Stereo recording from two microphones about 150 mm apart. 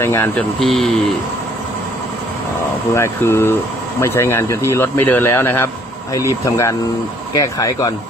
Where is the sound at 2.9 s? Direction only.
15° left (ahead or behind).